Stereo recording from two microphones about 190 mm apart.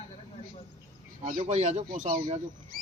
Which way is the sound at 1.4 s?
35° right (ahead or behind).